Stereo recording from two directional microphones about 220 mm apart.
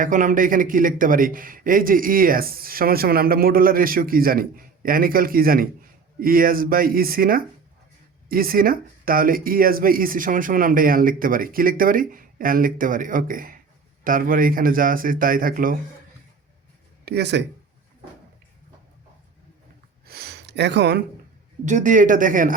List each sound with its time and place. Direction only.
0.0 s speech: 35° right (ahead or behind)
17.1 s speech: 50° right (ahead or behind)
20.1 s a sound: 45° right (ahead or behind)
21.6 s speech: 35° right (ahead or behind)